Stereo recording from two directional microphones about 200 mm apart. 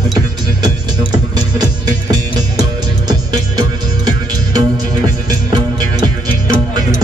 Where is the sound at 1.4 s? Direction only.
20° right (ahead or behind).